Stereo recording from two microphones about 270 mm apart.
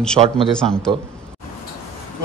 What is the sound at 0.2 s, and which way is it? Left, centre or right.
Speech, centre.